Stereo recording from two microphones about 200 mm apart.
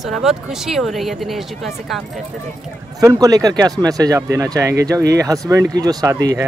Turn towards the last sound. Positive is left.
turn(degrees=-15)  # may be behind; listen again after turning